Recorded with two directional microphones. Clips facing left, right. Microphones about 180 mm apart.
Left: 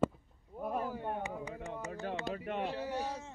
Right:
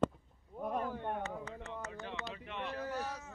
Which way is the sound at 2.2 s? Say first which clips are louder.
Left 6 dB; 45° left (ahead or behind).